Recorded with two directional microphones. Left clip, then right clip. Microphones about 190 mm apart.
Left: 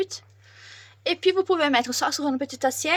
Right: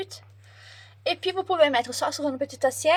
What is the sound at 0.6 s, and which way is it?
A woman's voice, 35° left (ahead or behind).